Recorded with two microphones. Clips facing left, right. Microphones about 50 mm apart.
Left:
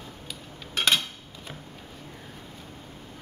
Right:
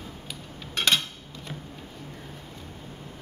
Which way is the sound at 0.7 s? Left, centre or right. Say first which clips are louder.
Even; centre.